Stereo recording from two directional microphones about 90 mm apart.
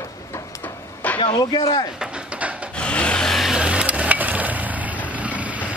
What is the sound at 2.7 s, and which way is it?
Wood, 10° left (ahead or behind).